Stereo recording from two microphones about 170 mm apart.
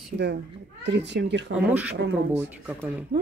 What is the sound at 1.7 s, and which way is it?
Speech, 10° right (ahead or behind).